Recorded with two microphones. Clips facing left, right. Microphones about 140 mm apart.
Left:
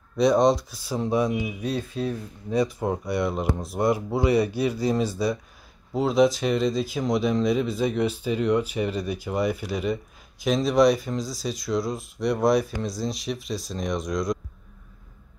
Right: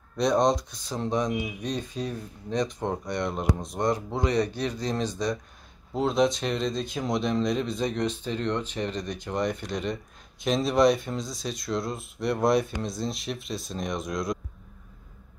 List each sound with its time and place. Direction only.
0.2 s speech: centre (ahead or behind)